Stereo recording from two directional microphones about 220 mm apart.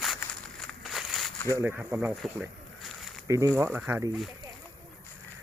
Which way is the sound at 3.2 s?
15° right (ahead or behind).